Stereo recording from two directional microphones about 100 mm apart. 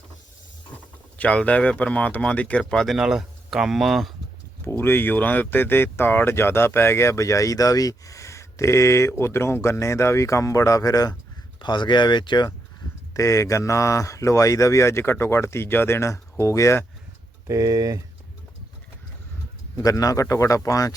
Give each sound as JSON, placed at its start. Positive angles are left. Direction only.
{"t": 1.2, "sound": "speech", "side_deg": 10}
{"t": 4.6, "sound": "speech", "side_deg": 25}
{"t": 11.6, "sound": "speech", "side_deg": 50}
{"t": 13.1, "sound": "speech", "side_deg": 30}
{"t": 17.5, "sound": "speech", "side_deg": -40}
{"t": 19.7, "sound": "speech", "side_deg": 35}